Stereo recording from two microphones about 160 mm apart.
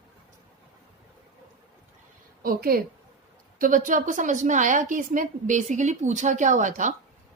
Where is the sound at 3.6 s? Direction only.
55° right (ahead or behind).